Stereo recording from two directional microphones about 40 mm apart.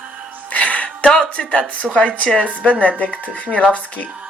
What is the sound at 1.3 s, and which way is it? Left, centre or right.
Speech, left.